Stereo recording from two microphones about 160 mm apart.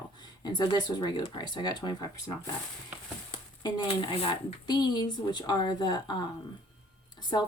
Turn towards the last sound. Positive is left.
turn(degrees=30)  # may be behind; listen again after turning